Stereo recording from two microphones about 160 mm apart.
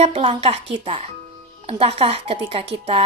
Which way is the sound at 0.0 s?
35° right (ahead or behind).